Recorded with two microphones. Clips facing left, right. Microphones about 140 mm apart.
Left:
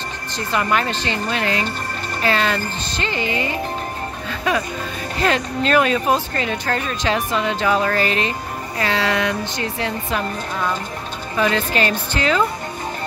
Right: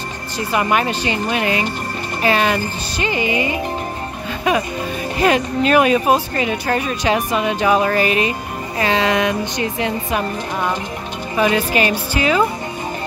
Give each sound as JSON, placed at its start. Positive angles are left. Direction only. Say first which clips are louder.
{"t": 0.4, "sound": "speech", "louder": "right 2 dB", "side_deg": -15}